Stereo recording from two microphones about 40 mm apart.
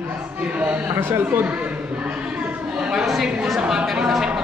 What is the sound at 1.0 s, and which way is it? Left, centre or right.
Speech, right.